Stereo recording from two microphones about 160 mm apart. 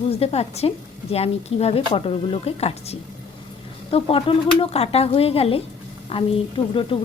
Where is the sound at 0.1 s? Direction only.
40° left (ahead or behind).